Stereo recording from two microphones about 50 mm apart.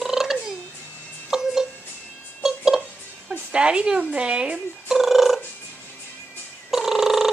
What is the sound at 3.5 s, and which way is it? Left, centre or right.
A woman's voice, centre.